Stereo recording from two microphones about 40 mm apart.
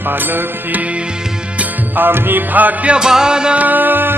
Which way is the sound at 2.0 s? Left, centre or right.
Right.